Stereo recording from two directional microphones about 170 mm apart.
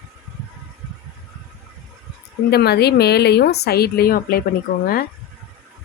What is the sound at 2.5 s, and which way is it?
A woman's voice, 70° left (ahead or behind).